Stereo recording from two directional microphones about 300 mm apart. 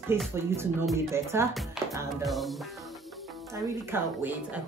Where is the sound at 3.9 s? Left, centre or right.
Centre.